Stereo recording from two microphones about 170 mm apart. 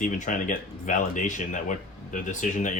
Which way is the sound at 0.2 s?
50° left (ahead or behind).